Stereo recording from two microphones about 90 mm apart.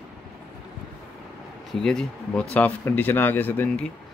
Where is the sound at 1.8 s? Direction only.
10° left (ahead or behind).